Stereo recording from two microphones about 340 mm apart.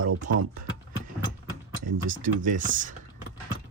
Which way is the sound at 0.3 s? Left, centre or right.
Right.